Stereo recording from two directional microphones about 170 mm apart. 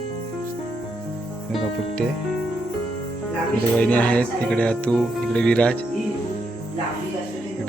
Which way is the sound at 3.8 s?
10° left (ahead or behind).